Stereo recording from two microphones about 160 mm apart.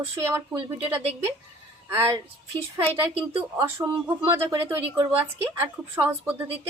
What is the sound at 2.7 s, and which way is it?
Speech, 15° right (ahead or behind).